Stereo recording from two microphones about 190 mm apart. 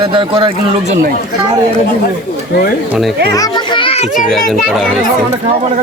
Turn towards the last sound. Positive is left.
turn(degrees=0)  # may be behind; listen again after turning